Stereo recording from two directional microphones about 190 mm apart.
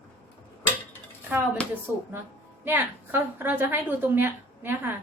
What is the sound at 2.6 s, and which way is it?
Speech, 10° right (ahead or behind).